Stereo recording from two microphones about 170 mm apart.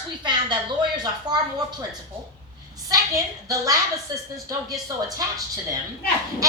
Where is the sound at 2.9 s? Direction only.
20° right (ahead or behind).